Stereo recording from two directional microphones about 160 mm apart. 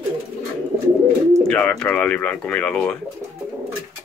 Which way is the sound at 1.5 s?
5° left (ahead or behind).